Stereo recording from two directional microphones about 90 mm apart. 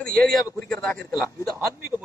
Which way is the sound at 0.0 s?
5° left (ahead or behind).